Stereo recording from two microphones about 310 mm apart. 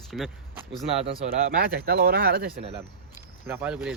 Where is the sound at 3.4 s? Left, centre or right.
Centre.